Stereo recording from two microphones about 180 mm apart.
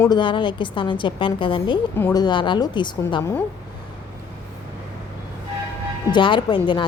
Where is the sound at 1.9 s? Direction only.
15° left (ahead or behind).